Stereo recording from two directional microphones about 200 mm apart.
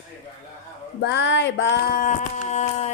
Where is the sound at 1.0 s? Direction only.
60° left (ahead or behind).